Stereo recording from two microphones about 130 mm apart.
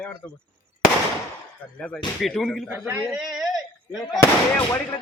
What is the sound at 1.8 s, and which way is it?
Speech, 5° left (ahead or behind).